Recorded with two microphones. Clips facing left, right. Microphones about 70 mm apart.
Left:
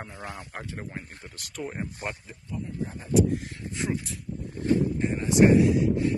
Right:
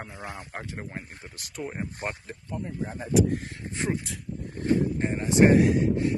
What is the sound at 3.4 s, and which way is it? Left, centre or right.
Speech, right.